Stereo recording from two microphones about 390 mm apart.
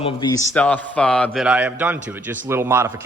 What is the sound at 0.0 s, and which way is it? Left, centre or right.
A man's voice, centre.